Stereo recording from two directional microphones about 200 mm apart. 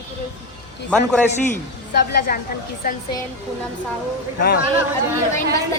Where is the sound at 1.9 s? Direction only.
55° left (ahead or behind).